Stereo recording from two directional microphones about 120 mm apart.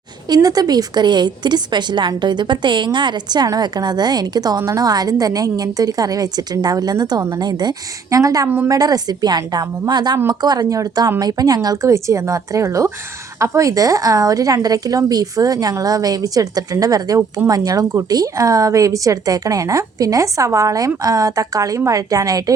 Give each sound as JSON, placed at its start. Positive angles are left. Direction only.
{"t": 0.3, "sound": "a woman's voice", "side_deg": -30}
{"t": 8.4, "sound": "a woman's voice", "side_deg": -15}
{"t": 8.7, "sound": "a woman's voice", "side_deg": -30}